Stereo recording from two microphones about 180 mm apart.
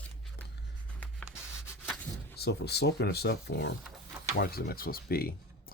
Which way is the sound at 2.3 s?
65° left (ahead or behind).